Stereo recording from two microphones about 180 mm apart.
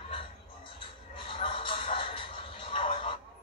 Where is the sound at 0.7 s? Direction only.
30° left (ahead or behind).